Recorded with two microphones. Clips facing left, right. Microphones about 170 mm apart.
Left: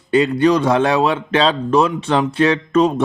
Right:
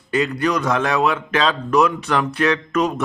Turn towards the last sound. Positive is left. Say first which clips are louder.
# left 5 dB
turn(degrees=30)  # may be behind; listen again after turning